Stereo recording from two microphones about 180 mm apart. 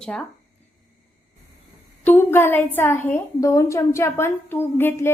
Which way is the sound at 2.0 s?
10° left (ahead or behind).